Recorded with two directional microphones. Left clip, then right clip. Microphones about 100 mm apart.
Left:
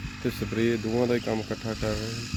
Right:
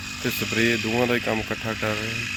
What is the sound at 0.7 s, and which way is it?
Speech, 30° right (ahead or behind).